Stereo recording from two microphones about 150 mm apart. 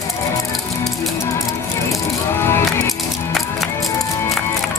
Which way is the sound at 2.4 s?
20° left (ahead or behind).